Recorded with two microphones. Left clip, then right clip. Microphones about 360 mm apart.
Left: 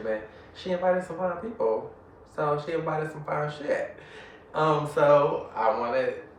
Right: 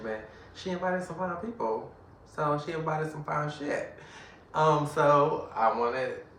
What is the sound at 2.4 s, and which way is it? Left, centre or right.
Speech, centre.